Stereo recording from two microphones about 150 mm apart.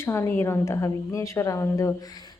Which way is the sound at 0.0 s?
15° left (ahead or behind).